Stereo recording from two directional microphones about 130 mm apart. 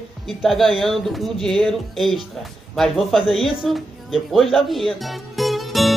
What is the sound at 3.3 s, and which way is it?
Speech, 45° left (ahead or behind).